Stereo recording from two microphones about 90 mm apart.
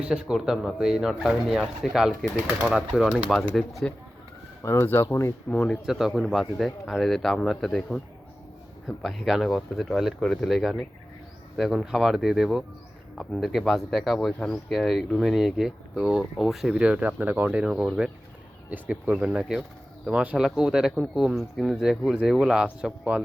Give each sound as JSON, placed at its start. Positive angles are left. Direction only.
{"t": 0.0, "sound": "speech", "side_deg": -10}
{"t": 4.6, "sound": "speech", "side_deg": 30}
{"t": 5.5, "sound": "speech", "side_deg": 15}
{"t": 5.8, "sound": "speech", "side_deg": -5}